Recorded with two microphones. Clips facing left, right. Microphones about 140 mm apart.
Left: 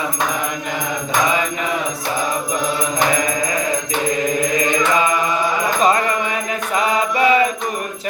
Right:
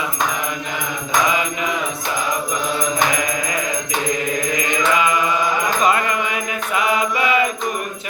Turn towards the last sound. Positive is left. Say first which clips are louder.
# left 3 dB
turn(degrees=35)  # may be behind; listen again after turning